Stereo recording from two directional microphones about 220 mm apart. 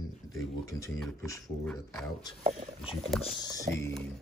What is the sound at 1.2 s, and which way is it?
Speech, 15° left (ahead or behind).